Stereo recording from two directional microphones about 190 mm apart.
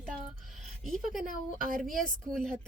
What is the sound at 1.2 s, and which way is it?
Speech, 45° right (ahead or behind).